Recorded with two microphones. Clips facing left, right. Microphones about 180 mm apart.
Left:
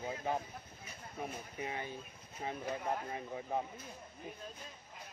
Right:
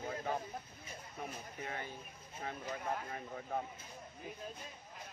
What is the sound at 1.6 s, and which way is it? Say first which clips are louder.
Speech: left 3 dB; 15° left (ahead or behind).